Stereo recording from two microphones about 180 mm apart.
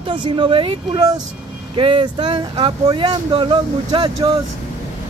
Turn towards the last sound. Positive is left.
turn(degrees=-25)  # may be behind; listen again after turning